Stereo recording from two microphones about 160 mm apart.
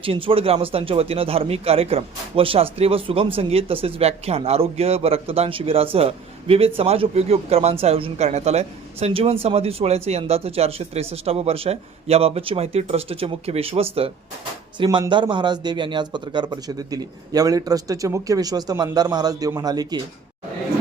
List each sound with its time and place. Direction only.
0.0 s a man's voice: 35° right (ahead or behind)